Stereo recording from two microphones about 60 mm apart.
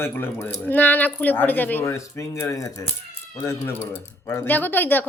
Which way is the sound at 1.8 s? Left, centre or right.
Left.